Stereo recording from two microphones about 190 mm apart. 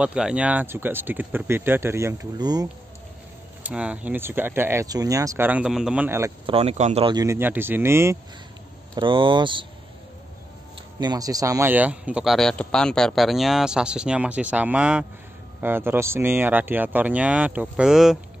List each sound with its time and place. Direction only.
0.0 s speech: 5° right (ahead or behind); by 2.7 s 20° right (ahead or behind)
3.6 s speech: 5° right (ahead or behind)
6.4 s speech: 30° right (ahead or behind)
7.1 s speech: 15° right (ahead or behind)
8.9 s speech: 25° right (ahead or behind)
11.0 s a man's voice: 20° right (ahead or behind); by 18.2 s centre (ahead or behind)